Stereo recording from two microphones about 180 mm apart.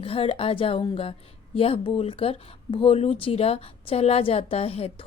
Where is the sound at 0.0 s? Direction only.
30° left (ahead or behind).